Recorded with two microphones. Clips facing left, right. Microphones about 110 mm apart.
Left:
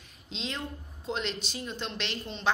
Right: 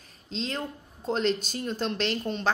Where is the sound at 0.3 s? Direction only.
40° right (ahead or behind).